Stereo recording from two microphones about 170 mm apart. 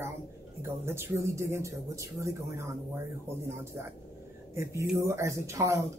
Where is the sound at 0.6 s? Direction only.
15° right (ahead or behind).